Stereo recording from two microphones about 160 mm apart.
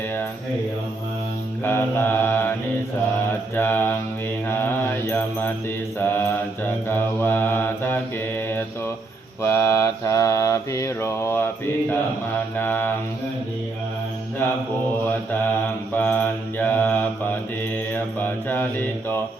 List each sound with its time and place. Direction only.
1.6 s mantra: 15° left (ahead or behind)
3.5 s mantra: 15° left (ahead or behind)
12.5 s mantra: 10° left (ahead or behind)
16.0 s mantra: 10° left (ahead or behind)